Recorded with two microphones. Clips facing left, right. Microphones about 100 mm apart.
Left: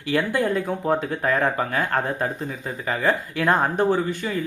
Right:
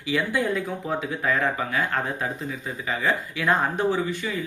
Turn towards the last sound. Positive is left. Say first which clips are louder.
# left 3 dB
turn(degrees=45)  # may be behind; listen again after turning